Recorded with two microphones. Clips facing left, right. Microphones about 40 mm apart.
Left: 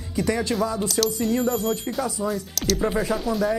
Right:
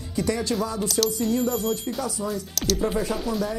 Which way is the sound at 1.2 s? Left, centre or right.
Centre.